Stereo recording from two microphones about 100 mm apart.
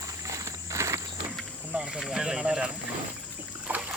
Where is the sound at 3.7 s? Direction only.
15° right (ahead or behind).